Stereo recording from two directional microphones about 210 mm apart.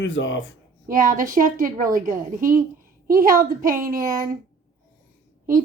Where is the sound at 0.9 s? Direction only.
40° right (ahead or behind).